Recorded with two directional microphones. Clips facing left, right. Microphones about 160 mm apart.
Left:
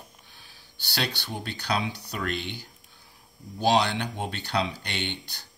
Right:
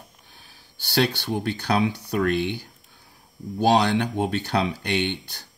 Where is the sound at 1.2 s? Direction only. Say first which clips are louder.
Right 8 dB; 50° right (ahead or behind).